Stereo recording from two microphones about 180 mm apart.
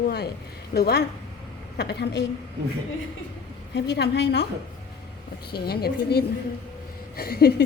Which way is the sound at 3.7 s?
70° left (ahead or behind).